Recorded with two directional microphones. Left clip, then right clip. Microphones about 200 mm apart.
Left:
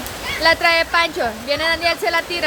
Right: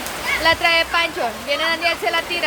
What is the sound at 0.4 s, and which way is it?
Speech, 30° left (ahead or behind).